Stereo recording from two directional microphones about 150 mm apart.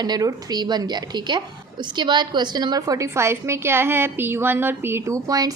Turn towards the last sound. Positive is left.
turn(degrees=-25)  # may be behind; listen again after turning